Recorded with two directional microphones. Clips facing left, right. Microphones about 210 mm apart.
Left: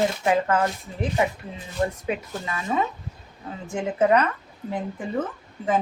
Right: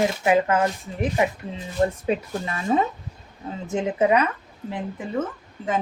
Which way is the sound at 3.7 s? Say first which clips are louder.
Even; 15° right (ahead or behind).